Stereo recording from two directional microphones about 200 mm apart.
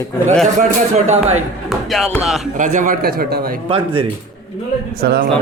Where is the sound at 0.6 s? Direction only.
35° right (ahead or behind).